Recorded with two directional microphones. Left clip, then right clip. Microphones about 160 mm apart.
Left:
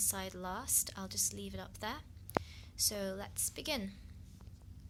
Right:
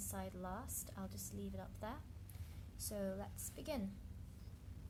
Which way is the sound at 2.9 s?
20° left (ahead or behind).